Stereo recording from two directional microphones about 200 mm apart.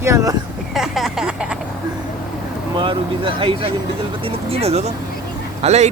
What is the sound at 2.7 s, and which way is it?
Speech, 25° right (ahead or behind).